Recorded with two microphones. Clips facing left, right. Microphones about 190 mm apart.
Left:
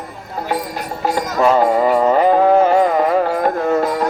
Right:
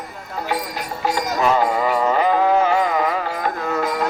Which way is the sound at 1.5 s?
40° left (ahead or behind).